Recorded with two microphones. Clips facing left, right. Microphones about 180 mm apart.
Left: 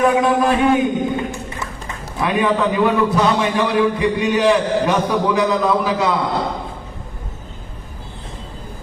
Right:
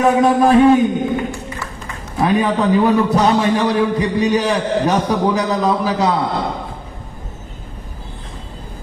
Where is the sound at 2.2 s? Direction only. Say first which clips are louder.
Right 2 dB; 40° right (ahead or behind).